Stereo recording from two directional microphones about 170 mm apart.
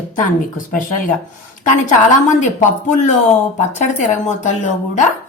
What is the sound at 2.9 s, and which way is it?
Speech, 45° left (ahead or behind).